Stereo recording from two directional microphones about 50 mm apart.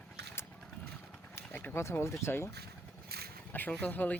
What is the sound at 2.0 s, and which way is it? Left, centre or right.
Speech, left.